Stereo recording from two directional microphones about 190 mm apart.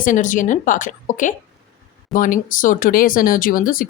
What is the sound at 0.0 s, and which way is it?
Speech, 45° left (ahead or behind).